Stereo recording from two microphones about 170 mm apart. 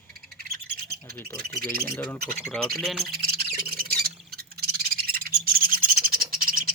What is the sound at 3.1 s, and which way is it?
Bird, 65° right (ahead or behind).